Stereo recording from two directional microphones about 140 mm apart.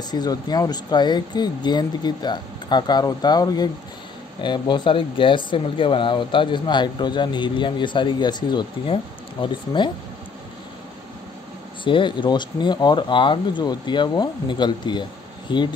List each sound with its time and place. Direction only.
0.1 s speech: 30° left (ahead or behind)
11.8 s speech: 35° left (ahead or behind)